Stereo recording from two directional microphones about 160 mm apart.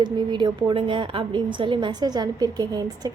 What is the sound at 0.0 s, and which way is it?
A woman's voice, 30° right (ahead or behind).